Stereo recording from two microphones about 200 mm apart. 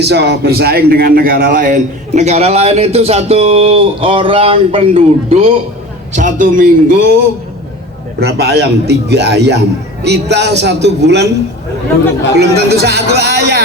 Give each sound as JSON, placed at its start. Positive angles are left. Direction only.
{"t": 0.0, "sound": "a man's voice", "side_deg": -55}
{"t": 6.1, "sound": "a man's voice", "side_deg": -40}
{"t": 12.4, "sound": "a man's voice", "side_deg": -55}